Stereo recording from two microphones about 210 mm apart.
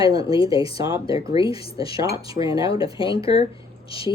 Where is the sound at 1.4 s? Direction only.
25° left (ahead or behind).